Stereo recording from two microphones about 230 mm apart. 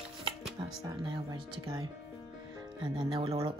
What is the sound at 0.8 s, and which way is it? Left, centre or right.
A woman's voice, centre.